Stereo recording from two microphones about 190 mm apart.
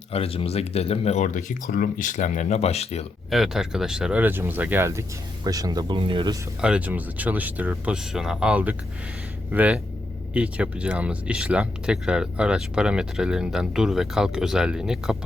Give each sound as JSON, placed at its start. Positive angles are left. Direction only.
{"t": 0.1, "sound": "speech", "side_deg": 30}
{"t": 3.2, "sound": "speech", "side_deg": 0}
{"t": 6.6, "sound": "speech", "side_deg": -5}